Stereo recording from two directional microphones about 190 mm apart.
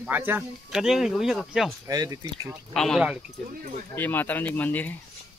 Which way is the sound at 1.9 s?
20° right (ahead or behind).